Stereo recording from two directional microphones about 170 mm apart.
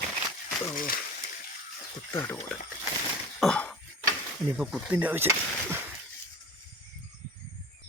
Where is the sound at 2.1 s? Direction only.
15° left (ahead or behind).